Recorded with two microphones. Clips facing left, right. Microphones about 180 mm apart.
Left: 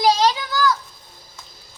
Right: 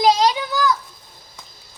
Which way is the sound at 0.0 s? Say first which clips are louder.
Right 1 dB; 20° right (ahead or behind).